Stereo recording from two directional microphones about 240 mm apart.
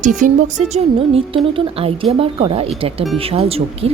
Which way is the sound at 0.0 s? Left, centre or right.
Right.